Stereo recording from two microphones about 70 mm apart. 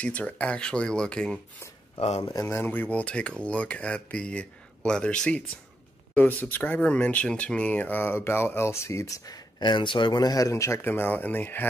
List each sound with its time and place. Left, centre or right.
0.0 s speech: centre
2.2 s speech: left
2.5 s speech: left; by 5.4 s centre
6.1 s speech: left